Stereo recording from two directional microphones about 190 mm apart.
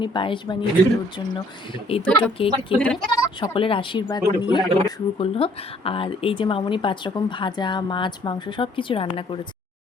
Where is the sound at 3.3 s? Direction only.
30° left (ahead or behind).